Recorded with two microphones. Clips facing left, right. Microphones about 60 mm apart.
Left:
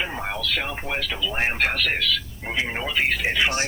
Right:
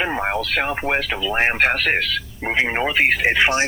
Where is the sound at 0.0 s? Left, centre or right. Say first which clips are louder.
Right 6 dB; right.